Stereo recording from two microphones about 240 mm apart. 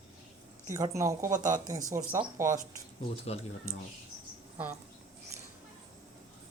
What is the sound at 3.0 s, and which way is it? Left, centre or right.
Speech, left.